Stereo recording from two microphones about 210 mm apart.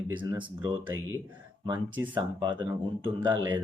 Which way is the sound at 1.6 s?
20° right (ahead or behind).